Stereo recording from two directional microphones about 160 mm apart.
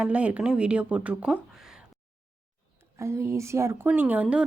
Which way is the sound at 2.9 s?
20° right (ahead or behind).